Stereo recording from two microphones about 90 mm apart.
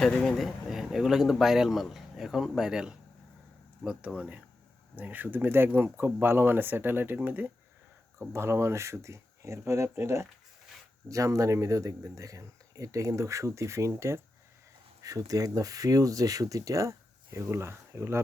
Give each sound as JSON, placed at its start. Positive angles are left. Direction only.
{"t": 0.0, "sound": "speech", "side_deg": 5}
{"t": 8.3, "sound": "speech", "side_deg": -30}
{"t": 15.0, "sound": "speech", "side_deg": -45}